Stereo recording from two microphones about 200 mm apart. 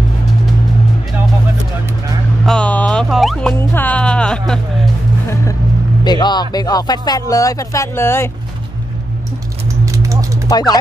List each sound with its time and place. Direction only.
2.4 s music: 5° left (ahead or behind)
6.0 s speech: 20° left (ahead or behind)
9.8 s a sound: 15° right (ahead or behind)
10.5 s speech: 20° left (ahead or behind)